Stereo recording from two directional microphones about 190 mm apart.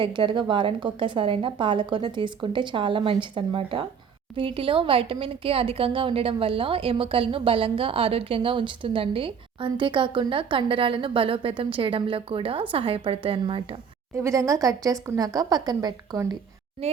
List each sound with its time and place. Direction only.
0.0 s a woman's voice: 25° right (ahead or behind)